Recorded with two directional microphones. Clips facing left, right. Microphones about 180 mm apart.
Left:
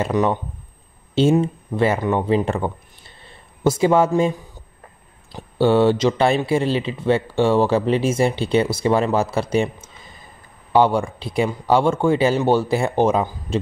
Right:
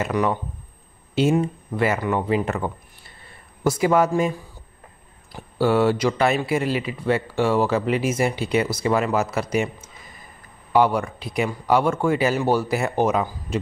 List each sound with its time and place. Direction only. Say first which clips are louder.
0.0 s speech: left 3 dB; 25° left (ahead or behind)
5.3 s speech: left 3 dB; 25° left (ahead or behind)